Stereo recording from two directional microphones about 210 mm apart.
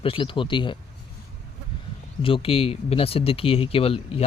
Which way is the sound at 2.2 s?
25° left (ahead or behind).